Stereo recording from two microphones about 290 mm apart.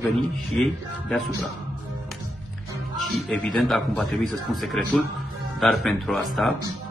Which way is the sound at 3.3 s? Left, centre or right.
Centre.